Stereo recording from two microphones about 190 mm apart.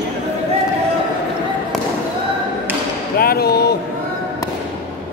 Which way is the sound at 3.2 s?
55° left (ahead or behind).